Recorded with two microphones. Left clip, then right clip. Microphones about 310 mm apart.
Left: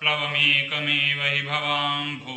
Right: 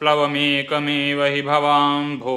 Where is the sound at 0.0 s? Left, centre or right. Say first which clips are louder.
Right 4 dB; centre.